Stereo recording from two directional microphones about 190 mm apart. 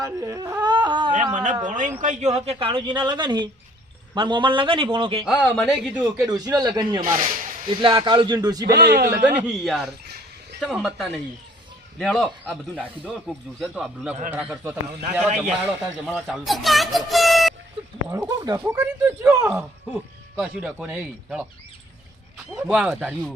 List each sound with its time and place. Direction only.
0.0 s a sound: 20° right (ahead or behind)
1.1 s a man's voice: 45° right (ahead or behind); by 5.2 s 25° right (ahead or behind)
5.4 s speech: 5° left (ahead or behind)
6.2 s speech: 20° right (ahead or behind)
8.6 s a man's voice: 60° right (ahead or behind)
9.4 s a man's voice: centre (ahead or behind)
18.1 s a man's voice: 20° right (ahead or behind)
20.3 s speech: 5° right (ahead or behind)
22.5 s speech: 5° right (ahead or behind)